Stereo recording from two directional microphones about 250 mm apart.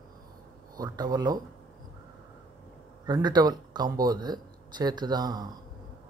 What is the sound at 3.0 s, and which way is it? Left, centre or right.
Speech, centre.